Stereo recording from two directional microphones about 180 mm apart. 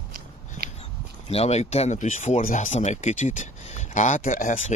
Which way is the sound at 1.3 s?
35° left (ahead or behind).